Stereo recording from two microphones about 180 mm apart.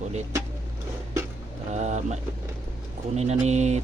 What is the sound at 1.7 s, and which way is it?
Vehicle, 40° right (ahead or behind).